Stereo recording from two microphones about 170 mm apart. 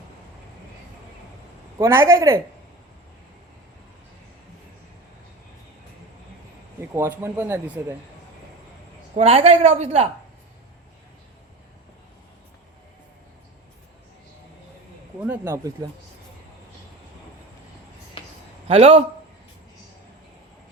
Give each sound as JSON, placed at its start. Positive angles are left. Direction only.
{"t": 1.8, "sound": "speech", "side_deg": -15}
{"t": 6.9, "sound": "speech", "side_deg": -15}
{"t": 9.1, "sound": "a woman's voice", "side_deg": -35}
{"t": 15.2, "sound": "speech", "side_deg": -10}
{"t": 18.2, "sound": "a sound", "side_deg": 30}
{"t": 18.7, "sound": "a woman's voice", "side_deg": -35}